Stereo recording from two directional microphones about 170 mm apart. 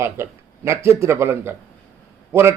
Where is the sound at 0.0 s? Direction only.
15° right (ahead or behind).